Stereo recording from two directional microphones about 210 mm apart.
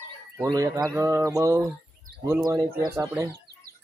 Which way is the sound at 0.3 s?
15° right (ahead or behind).